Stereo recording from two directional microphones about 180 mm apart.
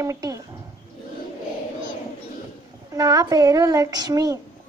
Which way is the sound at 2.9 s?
20° right (ahead or behind).